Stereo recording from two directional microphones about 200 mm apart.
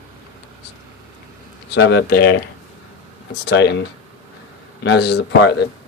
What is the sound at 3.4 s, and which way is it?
Speech, 55° left (ahead or behind).